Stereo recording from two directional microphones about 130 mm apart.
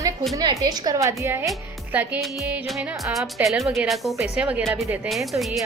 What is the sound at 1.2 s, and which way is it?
Music, 15° right (ahead or behind).